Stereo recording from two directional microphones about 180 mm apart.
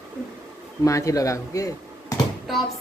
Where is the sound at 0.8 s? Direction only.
15° left (ahead or behind).